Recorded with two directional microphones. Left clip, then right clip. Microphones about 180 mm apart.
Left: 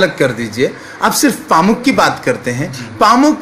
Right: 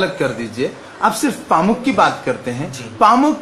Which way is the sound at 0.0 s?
15° left (ahead or behind).